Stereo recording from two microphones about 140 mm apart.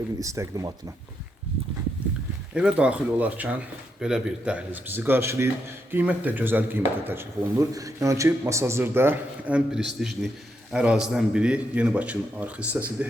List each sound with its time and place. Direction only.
0.2 s speech: 25° right (ahead or behind)
2.6 s a man's voice: 5° right (ahead or behind)